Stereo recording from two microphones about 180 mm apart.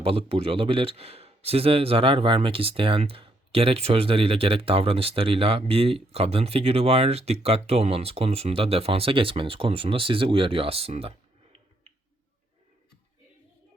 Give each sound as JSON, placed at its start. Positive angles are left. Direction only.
{"t": 0.0, "sound": "a man's voice", "side_deg": -30}